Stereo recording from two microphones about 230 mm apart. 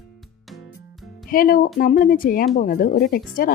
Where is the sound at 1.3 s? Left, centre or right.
Left.